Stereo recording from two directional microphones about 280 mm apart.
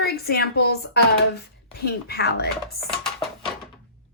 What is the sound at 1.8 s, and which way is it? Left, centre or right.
Speech, left.